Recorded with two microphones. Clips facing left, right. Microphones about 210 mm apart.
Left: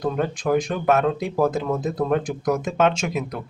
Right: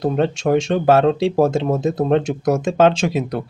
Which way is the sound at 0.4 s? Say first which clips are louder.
Right 4 dB; 30° right (ahead or behind).